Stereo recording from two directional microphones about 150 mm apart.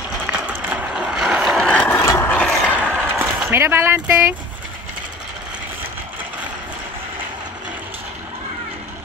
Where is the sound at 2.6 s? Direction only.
10° right (ahead or behind).